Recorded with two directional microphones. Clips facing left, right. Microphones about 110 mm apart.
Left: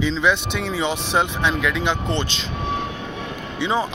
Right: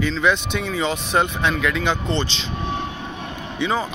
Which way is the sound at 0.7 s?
15° left (ahead or behind).